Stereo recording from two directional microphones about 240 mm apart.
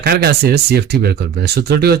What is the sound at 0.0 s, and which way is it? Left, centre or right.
Speech, right.